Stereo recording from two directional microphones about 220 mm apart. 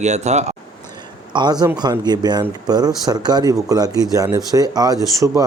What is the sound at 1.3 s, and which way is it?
Speech, 20° right (ahead or behind).